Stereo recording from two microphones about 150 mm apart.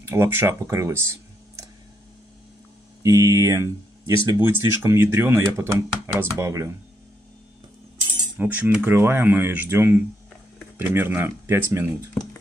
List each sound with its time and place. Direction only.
0.1 s speech: 15° right (ahead or behind)
3.0 s speech: 20° right (ahead or behind)
8.4 s speech: 15° right (ahead or behind)